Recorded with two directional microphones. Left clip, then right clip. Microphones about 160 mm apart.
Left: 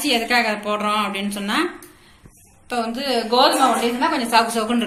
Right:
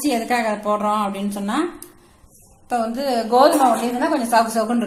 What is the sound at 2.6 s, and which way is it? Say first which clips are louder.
Speech: right 2 dB; 60° right (ahead or behind).